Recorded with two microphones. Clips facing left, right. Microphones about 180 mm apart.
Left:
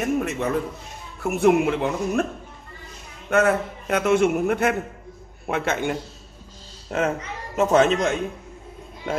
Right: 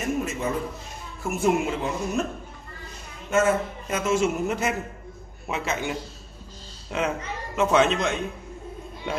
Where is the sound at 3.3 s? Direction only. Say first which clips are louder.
Left 2 dB; 65° left (ahead or behind).